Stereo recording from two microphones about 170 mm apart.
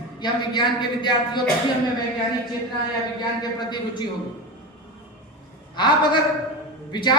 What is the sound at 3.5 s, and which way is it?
Speech, 25° left (ahead or behind).